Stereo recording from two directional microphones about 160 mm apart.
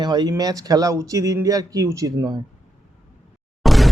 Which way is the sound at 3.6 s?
Centre (ahead or behind).